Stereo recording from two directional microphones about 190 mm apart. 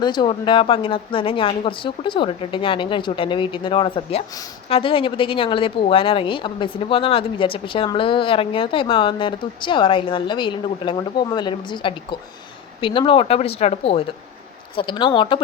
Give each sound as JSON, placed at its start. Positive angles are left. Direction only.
{"t": 0.0, "sound": "speech", "side_deg": 25}